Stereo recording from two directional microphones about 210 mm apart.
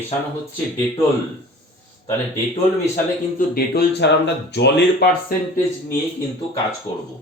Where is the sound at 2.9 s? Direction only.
40° left (ahead or behind).